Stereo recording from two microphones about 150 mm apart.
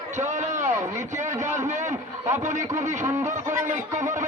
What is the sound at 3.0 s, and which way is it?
Speech, 20° right (ahead or behind).